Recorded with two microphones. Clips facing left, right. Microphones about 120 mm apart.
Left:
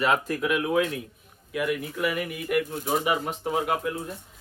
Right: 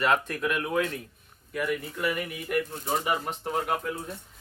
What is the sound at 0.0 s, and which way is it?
Speech, 5° left (ahead or behind).